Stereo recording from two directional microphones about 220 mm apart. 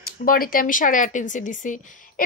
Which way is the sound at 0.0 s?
40° left (ahead or behind).